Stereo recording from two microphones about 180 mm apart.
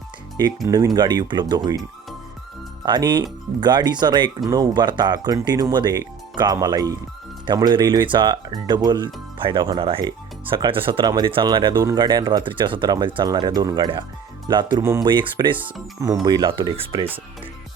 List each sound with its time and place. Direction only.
0.3 s speech: 20° right (ahead or behind)
2.8 s speech: 25° right (ahead or behind)